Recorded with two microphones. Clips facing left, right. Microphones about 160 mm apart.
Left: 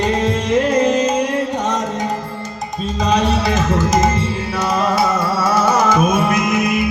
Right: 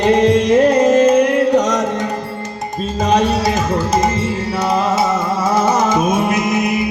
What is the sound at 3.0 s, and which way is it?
Music, 45° right (ahead or behind).